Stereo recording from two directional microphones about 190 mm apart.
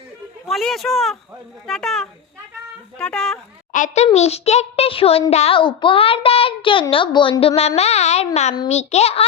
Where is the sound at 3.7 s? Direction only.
40° left (ahead or behind).